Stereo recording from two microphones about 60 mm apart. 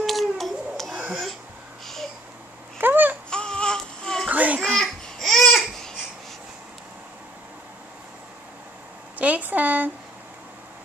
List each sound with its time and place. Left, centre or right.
0.0 s baby cry: centre
0.9 s wheeze: centre
2.8 s babbling: right
3.3 s baby cry: centre
4.3 s a sound: right
4.7 s babbling: centre
9.2 s a sound: right